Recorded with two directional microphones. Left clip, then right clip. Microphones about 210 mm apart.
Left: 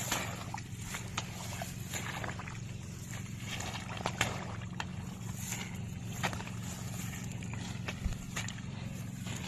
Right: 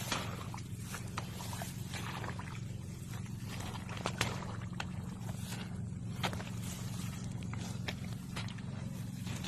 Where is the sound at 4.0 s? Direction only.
50° left (ahead or behind).